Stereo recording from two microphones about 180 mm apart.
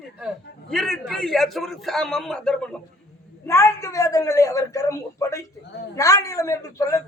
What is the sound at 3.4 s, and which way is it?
A man's voice, 15° left (ahead or behind).